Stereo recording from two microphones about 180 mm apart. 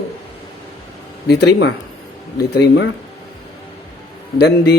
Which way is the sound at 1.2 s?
65° left (ahead or behind).